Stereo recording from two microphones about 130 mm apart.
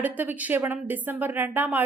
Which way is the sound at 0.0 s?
15° right (ahead or behind).